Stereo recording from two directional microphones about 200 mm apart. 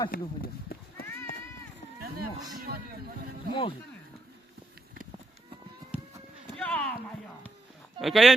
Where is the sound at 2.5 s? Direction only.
45° right (ahead or behind).